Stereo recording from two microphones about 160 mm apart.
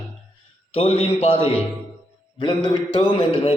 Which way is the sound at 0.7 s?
35° left (ahead or behind).